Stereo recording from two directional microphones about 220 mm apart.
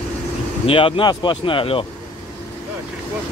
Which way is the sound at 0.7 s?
25° left (ahead or behind).